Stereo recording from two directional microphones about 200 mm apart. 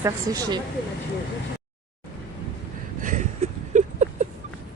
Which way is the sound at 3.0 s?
35° right (ahead or behind).